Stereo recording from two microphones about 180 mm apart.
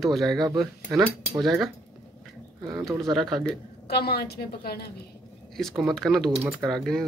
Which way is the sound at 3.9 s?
60° left (ahead or behind).